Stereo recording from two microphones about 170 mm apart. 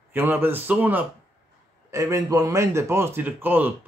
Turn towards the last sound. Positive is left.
turn(degrees=-10)  # may be behind; listen again after turning